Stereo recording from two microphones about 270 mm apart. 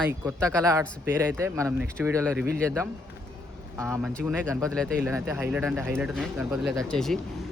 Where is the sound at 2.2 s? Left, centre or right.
Centre.